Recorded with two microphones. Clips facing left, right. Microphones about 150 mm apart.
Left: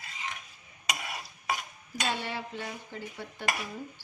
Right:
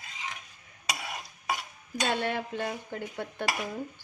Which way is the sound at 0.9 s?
Centre (ahead or behind).